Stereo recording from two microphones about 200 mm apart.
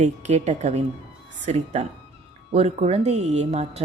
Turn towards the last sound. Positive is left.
turn(degrees=-30)  # may be behind; listen again after turning